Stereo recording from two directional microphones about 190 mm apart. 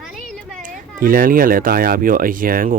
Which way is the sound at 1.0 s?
45° right (ahead or behind).